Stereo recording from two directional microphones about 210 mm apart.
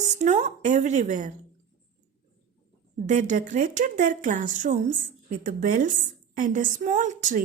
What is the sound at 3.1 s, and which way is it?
A woman's voice, 35° right (ahead or behind).